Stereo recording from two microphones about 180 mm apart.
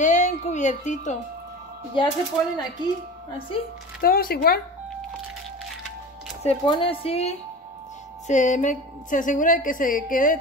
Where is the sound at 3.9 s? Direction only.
55° left (ahead or behind).